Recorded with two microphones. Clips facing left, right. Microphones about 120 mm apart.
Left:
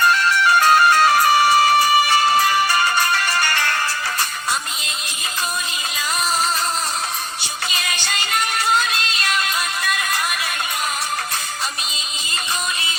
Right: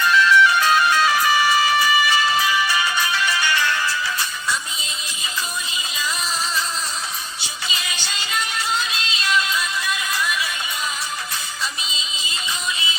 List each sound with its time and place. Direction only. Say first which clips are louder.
0.0 s music: right 1 dB; 50° left (ahead or behind)
7.7 s music: left 3 dB; 60° left (ahead or behind)